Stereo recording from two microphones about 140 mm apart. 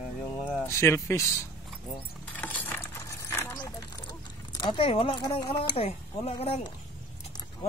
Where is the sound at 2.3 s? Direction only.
10° left (ahead or behind); by 6.7 s 40° left (ahead or behind).